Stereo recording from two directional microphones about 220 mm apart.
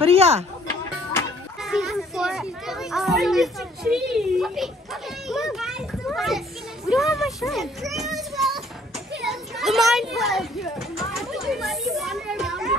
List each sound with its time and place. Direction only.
0.0 s speech: 25° right (ahead or behind)
1.6 s a child's voice: centre (ahead or behind)
5.3 s children playing: centre (ahead or behind)
6.9 s a child's voice: centre (ahead or behind)
10.8 s children playing: centre (ahead or behind)